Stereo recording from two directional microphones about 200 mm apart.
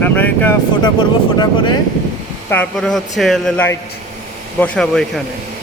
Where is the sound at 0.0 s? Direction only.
10° left (ahead or behind).